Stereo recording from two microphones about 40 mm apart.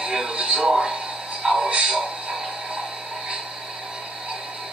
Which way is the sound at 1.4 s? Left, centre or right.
Centre.